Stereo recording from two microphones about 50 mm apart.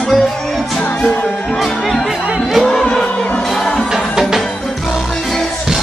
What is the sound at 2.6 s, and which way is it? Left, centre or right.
Music, centre.